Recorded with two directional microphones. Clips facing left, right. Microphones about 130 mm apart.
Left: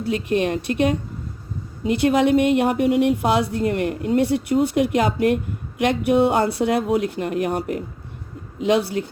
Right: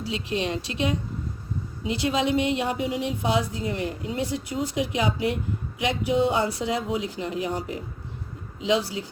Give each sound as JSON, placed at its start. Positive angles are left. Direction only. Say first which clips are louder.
{"t": 0.0, "sound": "speech", "louder": "left 7 dB", "side_deg": 55}